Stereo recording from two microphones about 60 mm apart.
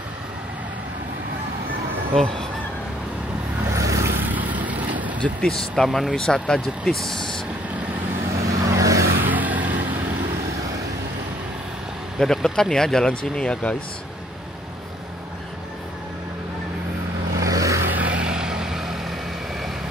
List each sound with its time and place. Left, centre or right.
3.7 s vehicle: right
4.3 s vehicle: right
5.5 s speech: centre
8.5 s vehicle: right
9.2 s vehicle: right
12.2 s speech: centre
17.4 s vehicle: right
17.9 s vehicle: right; by 19.1 s centre